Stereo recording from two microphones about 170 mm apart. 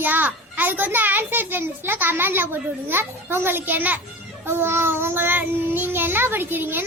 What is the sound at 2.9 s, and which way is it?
Child singing, 15° right (ahead or behind).